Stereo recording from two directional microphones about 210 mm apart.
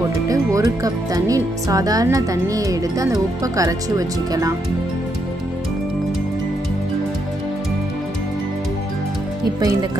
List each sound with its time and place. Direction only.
0.3 s speech: 15° right (ahead or behind)